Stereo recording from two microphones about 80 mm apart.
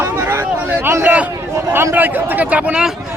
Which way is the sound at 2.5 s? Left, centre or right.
Centre.